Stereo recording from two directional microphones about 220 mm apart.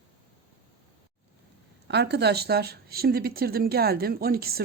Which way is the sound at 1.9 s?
50° right (ahead or behind).